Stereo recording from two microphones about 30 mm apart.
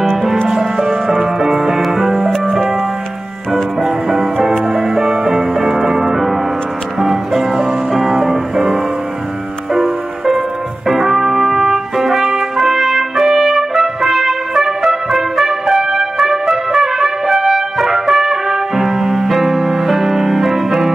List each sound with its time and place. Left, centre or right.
0.5 s music: centre
3.8 s music: centre
10.9 s trumpet: centre